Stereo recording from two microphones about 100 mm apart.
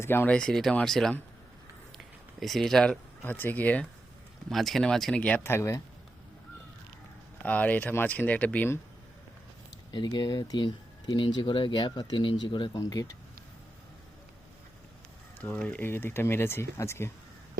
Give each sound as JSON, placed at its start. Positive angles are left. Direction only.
{"t": 0.0, "sound": "speech", "side_deg": 20}
{"t": 0.3, "sound": "speech", "side_deg": 5}
{"t": 2.4, "sound": "speech", "side_deg": 0}
{"t": 3.2, "sound": "speech", "side_deg": 20}
{"t": 4.4, "sound": "speech", "side_deg": 0}
{"t": 5.4, "sound": "speech", "side_deg": 25}
{"t": 7.4, "sound": "speech", "side_deg": 15}
{"t": 9.9, "sound": "speech", "side_deg": 45}
{"t": 12.8, "sound": "speech", "side_deg": 35}
{"t": 15.4, "sound": "speech", "side_deg": 15}